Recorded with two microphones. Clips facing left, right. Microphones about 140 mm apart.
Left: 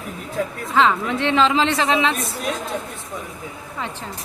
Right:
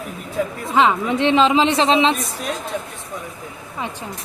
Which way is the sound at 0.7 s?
15° right (ahead or behind).